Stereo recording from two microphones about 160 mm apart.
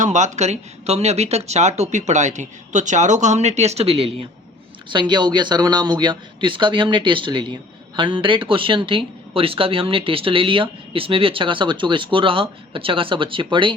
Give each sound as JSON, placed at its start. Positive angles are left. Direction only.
{"t": 0.0, "sound": "speech", "side_deg": -50}